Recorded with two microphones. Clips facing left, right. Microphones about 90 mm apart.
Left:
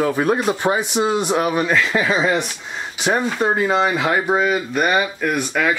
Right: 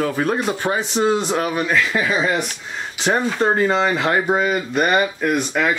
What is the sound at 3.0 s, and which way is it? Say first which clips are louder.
Speech: even; 5° left (ahead or behind).